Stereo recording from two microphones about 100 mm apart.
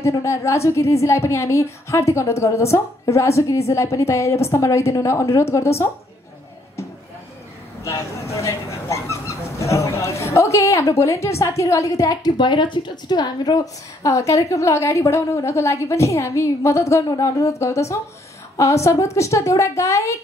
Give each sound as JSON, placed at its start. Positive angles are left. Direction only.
{"t": 0.0, "sound": "a woman's voice", "side_deg": 30}
{"t": 7.8, "sound": "speech", "side_deg": 30}
{"t": 14.0, "sound": "a woman's voice", "side_deg": 30}